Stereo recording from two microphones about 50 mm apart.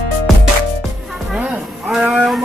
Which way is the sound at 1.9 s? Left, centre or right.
Centre.